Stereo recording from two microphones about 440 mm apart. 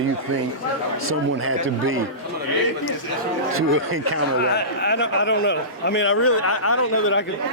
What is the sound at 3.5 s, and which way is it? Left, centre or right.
Speech, right.